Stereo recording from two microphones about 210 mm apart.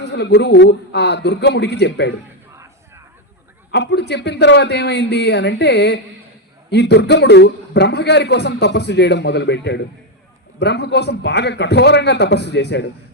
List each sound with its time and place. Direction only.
0.0 s a man's voice: 55° left (ahead or behind)
3.7 s a man's voice: 55° left (ahead or behind)